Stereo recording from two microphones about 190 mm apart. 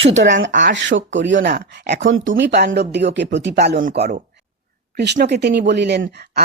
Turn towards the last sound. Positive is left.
turn(degrees=-60)  # may be behind; listen again after turning